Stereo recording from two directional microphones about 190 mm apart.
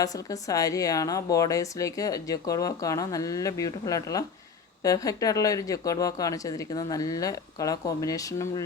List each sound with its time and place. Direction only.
0.0 s a woman's voice: 20° left (ahead or behind)